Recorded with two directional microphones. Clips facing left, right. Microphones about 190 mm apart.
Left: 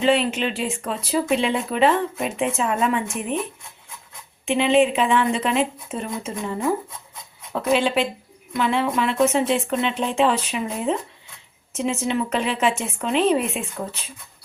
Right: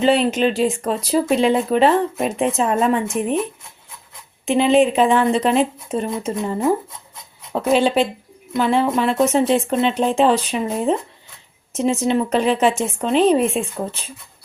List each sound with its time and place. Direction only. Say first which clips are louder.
0.0 s speech: right 4 dB; 40° right (ahead or behind)
4.4 s speech: right 3 dB; 40° right (ahead or behind)